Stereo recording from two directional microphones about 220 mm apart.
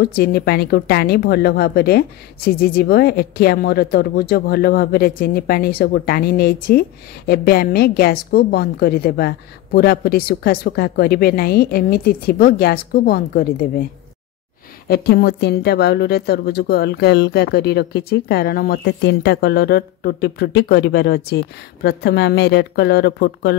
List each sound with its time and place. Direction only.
0.0 s a woman's voice: 45° left (ahead or behind)
14.9 s a woman's voice: 45° left (ahead or behind)